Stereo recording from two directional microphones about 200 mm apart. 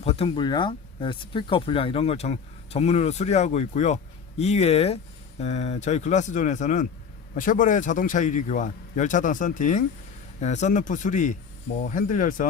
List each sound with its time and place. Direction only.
0.0 s speech: 30° left (ahead or behind)